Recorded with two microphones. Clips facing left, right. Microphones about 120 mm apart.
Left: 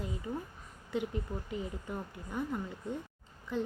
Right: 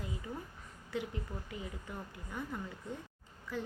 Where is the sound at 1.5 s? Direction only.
20° left (ahead or behind).